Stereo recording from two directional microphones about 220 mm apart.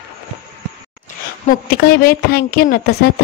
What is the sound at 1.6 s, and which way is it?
A woman's voice, 45° left (ahead or behind).